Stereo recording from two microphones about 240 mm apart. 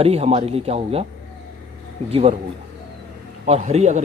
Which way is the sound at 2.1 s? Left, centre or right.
Right.